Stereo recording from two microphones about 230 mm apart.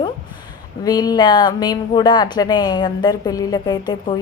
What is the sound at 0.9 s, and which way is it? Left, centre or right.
A woman's voice, centre.